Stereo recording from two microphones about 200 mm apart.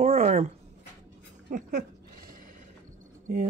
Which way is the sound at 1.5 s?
40° right (ahead or behind).